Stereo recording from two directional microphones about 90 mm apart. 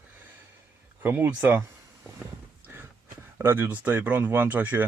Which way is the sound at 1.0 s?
20° right (ahead or behind).